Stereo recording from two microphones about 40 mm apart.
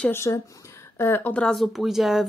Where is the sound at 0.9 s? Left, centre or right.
Left.